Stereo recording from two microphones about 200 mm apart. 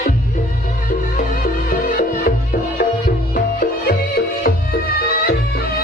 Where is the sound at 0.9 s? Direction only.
40° left (ahead or behind).